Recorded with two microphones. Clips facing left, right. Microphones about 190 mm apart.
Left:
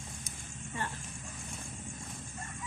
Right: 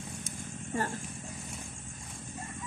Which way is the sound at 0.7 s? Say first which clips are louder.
Right 6 dB; 45° right (ahead or behind).